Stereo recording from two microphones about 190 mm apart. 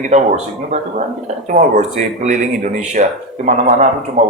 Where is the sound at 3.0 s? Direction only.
35° right (ahead or behind).